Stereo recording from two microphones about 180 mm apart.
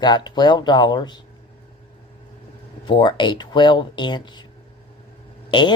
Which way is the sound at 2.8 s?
25° left (ahead or behind).